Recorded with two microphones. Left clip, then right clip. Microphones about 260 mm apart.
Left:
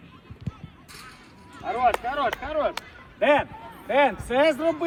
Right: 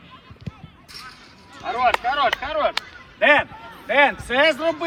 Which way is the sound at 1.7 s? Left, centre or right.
Right.